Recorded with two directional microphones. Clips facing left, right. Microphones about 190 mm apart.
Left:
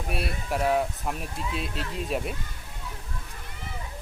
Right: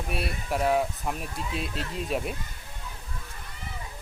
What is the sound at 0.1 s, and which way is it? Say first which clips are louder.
Speech: left 1 dB; centre (ahead or behind).